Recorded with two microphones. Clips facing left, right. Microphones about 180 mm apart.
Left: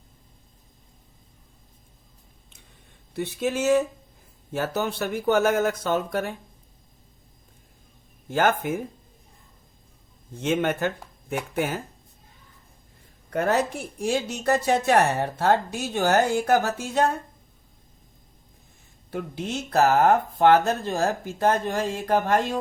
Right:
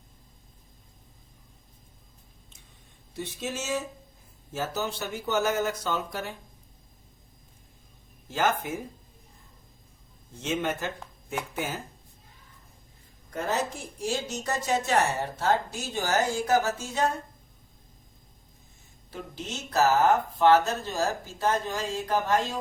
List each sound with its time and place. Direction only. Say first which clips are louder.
3.2 s a woman's voice: left 8 dB; 60° left (ahead or behind)
8.3 s a woman's voice: left 5 dB; 55° left (ahead or behind)
10.4 s a woman's voice: left 6 dB; 55° left (ahead or behind)
13.3 s a woman's voice: left 6 dB; 65° left (ahead or behind)
19.1 s a woman's voice: left 7 dB; 55° left (ahead or behind)